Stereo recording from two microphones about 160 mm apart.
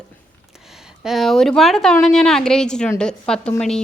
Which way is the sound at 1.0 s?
Centre (ahead or behind).